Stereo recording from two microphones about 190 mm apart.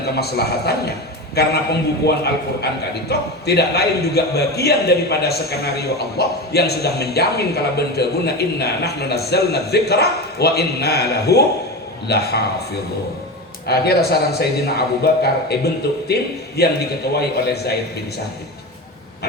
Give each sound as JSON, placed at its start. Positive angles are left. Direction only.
{"t": 0.0, "sound": "a man's voice", "side_deg": 60}
{"t": 13.7, "sound": "a man's voice", "side_deg": 55}